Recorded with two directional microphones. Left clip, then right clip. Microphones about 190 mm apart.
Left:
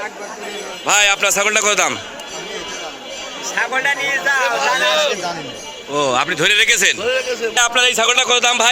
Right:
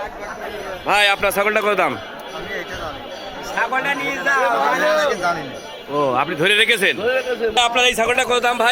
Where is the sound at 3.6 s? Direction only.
65° right (ahead or behind).